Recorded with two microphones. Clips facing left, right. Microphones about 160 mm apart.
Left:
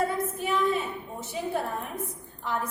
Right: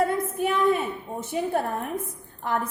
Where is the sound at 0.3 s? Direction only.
55° right (ahead or behind).